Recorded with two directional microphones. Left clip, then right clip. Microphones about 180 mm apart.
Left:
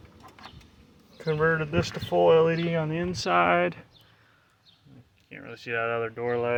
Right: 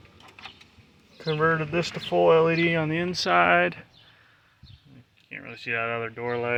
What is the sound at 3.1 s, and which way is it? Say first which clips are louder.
Speech: right 2 dB; centre (ahead or behind).